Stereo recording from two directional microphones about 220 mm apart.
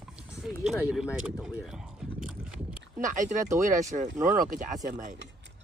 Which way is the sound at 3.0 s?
35° right (ahead or behind).